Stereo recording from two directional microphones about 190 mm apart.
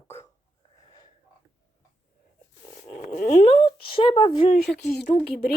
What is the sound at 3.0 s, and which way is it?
Speech, 40° left (ahead or behind).